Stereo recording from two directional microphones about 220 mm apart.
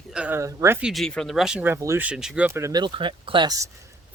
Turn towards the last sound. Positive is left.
turn(degrees=-15)  # may be behind; listen again after turning